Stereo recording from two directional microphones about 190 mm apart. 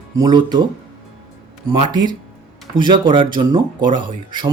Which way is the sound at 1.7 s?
25° right (ahead or behind).